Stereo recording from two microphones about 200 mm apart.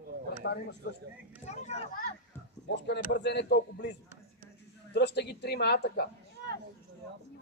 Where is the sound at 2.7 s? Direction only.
60° left (ahead or behind).